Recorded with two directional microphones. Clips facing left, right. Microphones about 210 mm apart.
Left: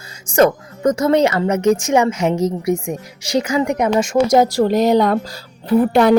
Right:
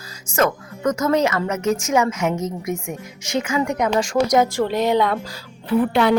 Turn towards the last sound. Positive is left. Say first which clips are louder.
# left 5 dB
turn(degrees=45)  # may be behind; listen again after turning